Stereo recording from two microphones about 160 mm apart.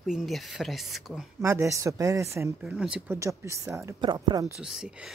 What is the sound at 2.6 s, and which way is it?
Speech, 5° right (ahead or behind).